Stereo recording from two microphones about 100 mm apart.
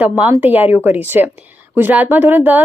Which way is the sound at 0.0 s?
15° right (ahead or behind).